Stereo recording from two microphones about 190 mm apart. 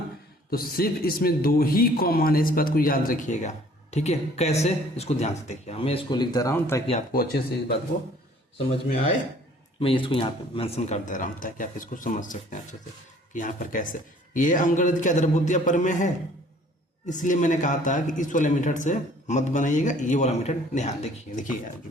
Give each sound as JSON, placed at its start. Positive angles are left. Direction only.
{"t": 0.5, "sound": "a man's voice", "side_deg": 50}
{"t": 7.1, "sound": "a man's voice", "side_deg": 50}
{"t": 9.8, "sound": "a man's voice", "side_deg": 25}